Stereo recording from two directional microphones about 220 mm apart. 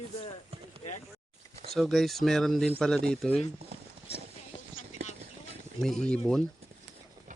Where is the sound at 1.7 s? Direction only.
Centre (ahead or behind).